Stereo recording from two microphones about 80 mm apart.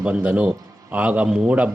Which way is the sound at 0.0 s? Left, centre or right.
Centre.